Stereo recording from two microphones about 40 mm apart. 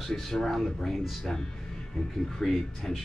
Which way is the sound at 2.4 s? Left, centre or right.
Centre.